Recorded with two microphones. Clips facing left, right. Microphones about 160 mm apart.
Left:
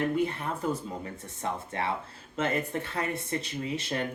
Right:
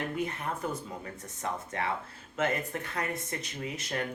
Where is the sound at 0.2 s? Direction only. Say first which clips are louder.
Left 4 dB; 30° left (ahead or behind).